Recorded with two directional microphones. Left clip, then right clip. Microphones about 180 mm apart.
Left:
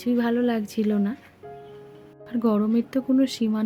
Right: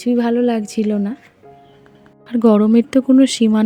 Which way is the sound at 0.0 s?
25° right (ahead or behind).